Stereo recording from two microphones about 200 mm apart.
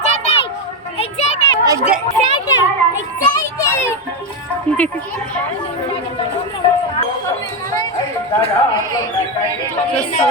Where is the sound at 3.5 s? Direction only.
10° left (ahead or behind).